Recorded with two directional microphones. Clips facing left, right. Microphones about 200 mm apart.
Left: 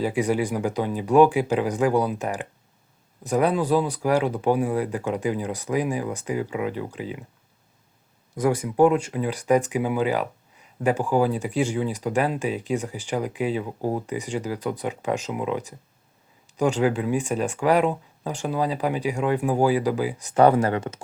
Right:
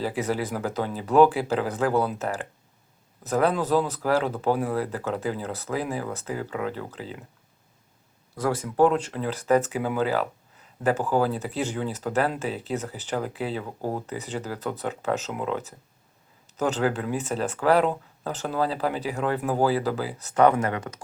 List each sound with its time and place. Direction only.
0.0 s speech: 15° left (ahead or behind)
8.4 s speech: 15° left (ahead or behind)
20.3 s speech: 30° left (ahead or behind)